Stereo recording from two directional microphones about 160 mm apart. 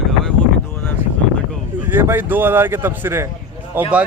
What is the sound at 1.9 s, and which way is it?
A man's voice, 15° right (ahead or behind).